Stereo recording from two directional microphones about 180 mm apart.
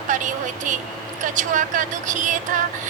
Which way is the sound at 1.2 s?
45° right (ahead or behind).